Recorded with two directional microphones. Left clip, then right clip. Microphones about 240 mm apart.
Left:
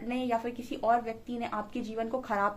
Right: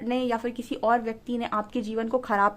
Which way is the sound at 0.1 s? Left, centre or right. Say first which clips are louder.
Right 4 dB; right.